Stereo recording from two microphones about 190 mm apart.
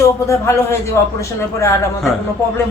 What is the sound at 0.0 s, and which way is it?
Speech, 15° left (ahead or behind).